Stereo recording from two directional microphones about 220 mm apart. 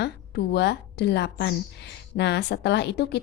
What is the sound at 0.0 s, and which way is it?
A woman's voice, 50° left (ahead or behind).